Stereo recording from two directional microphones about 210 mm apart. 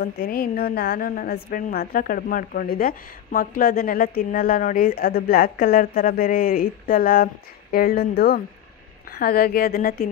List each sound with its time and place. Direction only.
0.0 s a woman's voice: 45° left (ahead or behind)